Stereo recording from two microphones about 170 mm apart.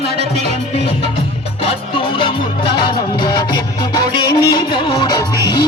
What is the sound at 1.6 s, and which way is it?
Music, 30° left (ahead or behind).